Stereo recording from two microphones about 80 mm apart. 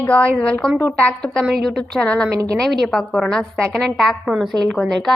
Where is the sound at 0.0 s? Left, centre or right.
Centre.